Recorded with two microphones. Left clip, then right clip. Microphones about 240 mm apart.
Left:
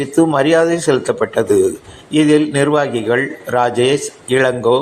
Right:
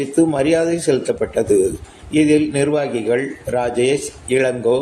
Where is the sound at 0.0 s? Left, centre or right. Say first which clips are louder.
Left 3 dB; centre.